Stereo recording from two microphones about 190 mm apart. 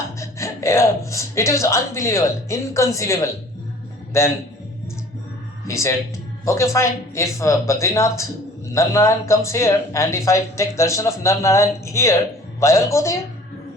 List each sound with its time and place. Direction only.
0.2 s speech: 15° left (ahead or behind)
5.6 s speech: 15° left (ahead or behind)